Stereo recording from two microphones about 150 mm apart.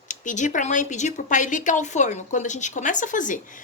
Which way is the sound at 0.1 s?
55° left (ahead or behind).